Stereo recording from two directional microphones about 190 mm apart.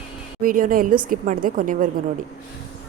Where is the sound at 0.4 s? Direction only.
45° right (ahead or behind).